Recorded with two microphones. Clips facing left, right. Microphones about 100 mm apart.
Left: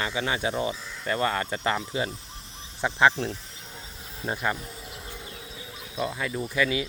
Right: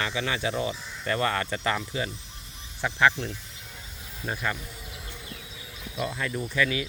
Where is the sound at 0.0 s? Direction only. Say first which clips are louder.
Left 1 dB; 25° left (ahead or behind).